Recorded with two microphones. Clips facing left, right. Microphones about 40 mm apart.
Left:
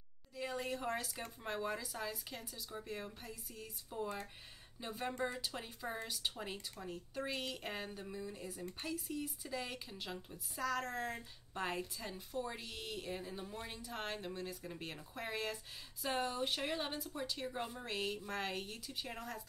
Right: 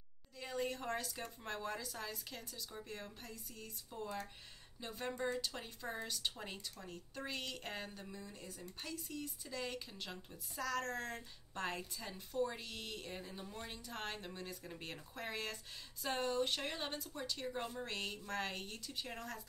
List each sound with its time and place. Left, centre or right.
0.4 s a woman's voice: centre